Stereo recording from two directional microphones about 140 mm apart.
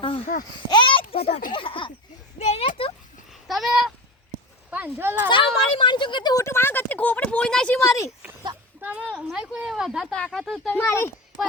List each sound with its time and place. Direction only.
0.3 s a child's voice: 75° left (ahead or behind)
0.7 s a sound: 35° left (ahead or behind)
1.1 s a child's voice: 45° left (ahead or behind)
2.4 s speech: 55° left (ahead or behind)
2.6 s speech: 40° left (ahead or behind)
3.4 s speech: centre (ahead or behind)
4.7 s speech: 15° right (ahead or behind)
5.3 s speech: 35° left (ahead or behind); by 7.9 s 5° left (ahead or behind)
7.9 s speech: 20° left (ahead or behind)
8.8 s speech: 10° right (ahead or behind)
10.8 s speech: 15° left (ahead or behind)